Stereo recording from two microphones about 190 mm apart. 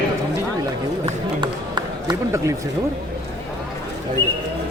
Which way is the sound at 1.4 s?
25° right (ahead or behind).